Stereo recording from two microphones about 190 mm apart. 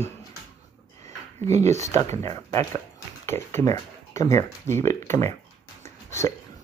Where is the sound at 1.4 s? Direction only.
35° right (ahead or behind).